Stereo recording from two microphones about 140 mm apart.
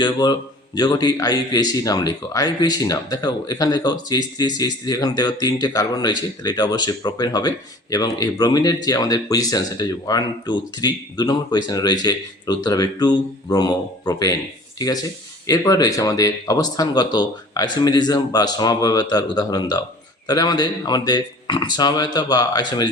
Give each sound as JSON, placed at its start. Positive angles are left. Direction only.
{"t": 0.0, "sound": "a man's voice", "side_deg": 30}